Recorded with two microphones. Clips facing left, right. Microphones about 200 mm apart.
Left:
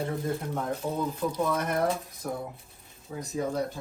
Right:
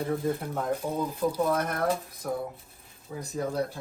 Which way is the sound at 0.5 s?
10° right (ahead or behind).